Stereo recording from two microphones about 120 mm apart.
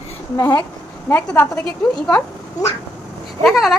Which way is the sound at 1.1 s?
20° left (ahead or behind).